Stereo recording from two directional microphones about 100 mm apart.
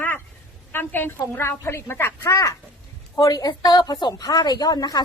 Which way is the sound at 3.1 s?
40° left (ahead or behind).